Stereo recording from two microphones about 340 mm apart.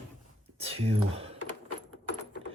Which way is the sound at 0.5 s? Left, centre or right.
Centre.